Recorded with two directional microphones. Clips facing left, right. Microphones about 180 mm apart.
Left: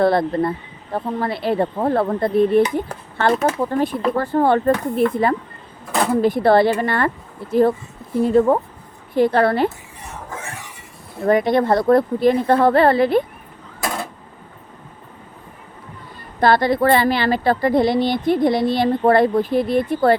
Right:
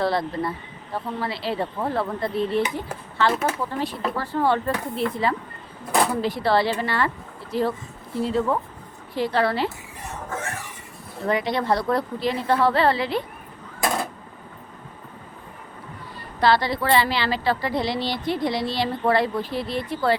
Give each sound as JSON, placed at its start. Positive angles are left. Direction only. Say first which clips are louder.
{"t": 0.0, "sound": "a woman's voice", "louder": "left 7 dB", "side_deg": 55}
{"t": 11.3, "sound": "a woman's voice", "louder": "left 7 dB", "side_deg": 50}
{"t": 16.4, "sound": "a woman's voice", "louder": "left 5 dB", "side_deg": 50}